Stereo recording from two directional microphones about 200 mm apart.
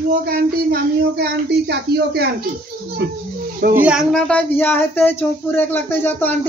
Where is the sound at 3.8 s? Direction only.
5° right (ahead or behind).